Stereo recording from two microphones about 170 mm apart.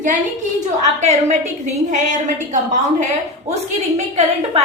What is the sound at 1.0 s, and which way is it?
A woman's voice, 40° right (ahead or behind).